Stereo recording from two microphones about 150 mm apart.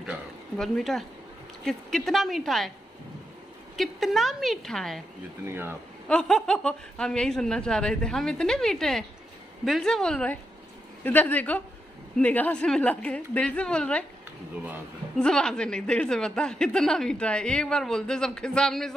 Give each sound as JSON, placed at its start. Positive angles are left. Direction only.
{"t": 0.0, "sound": "speech", "side_deg": 0}
{"t": 3.7, "sound": "speech", "side_deg": 0}
{"t": 5.5, "sound": "speech", "side_deg": -15}
{"t": 6.0, "sound": "a woman's voice", "side_deg": 5}
{"t": 15.1, "sound": "speech", "side_deg": 5}